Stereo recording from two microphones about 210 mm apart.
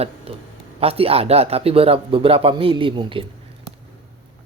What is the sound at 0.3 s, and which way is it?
Speech, 30° right (ahead or behind).